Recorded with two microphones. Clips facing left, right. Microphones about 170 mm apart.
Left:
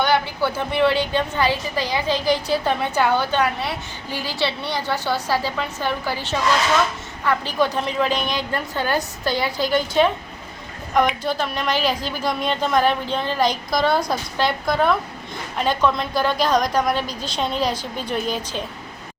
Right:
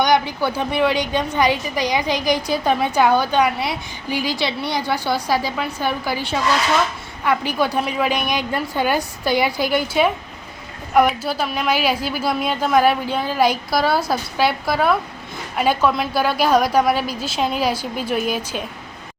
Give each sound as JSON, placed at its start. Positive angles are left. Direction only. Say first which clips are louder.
{"t": 0.0, "sound": "a woman's voice", "louder": "right 2 dB", "side_deg": -15}